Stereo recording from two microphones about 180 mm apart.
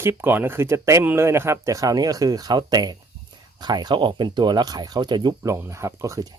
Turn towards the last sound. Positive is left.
turn(degrees=-20)  # may be behind; listen again after turning